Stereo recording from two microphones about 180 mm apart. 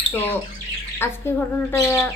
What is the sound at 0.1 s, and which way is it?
Speech, 10° left (ahead or behind).